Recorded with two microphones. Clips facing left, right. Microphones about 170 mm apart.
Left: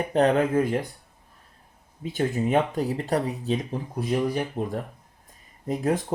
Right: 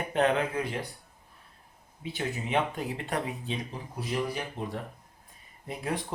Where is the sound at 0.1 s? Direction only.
35° left (ahead or behind).